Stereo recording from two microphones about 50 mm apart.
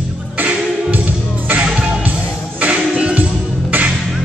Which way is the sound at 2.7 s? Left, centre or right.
Right.